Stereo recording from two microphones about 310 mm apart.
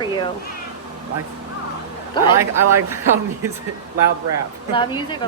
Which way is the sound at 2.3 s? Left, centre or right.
Centre.